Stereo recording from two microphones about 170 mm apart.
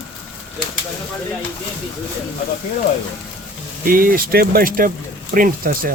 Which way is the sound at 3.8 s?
55° right (ahead or behind).